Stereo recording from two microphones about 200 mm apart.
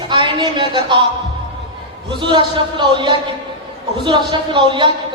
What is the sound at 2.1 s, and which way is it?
A man's voice, 25° right (ahead or behind).